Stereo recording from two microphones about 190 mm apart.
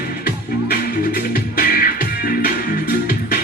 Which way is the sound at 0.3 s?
55° left (ahead or behind).